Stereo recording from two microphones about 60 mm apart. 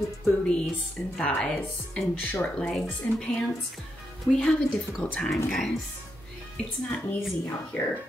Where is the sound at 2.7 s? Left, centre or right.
Centre.